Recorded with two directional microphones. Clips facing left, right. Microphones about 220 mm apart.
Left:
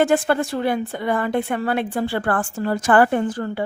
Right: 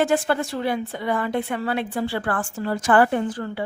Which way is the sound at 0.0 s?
50° left (ahead or behind).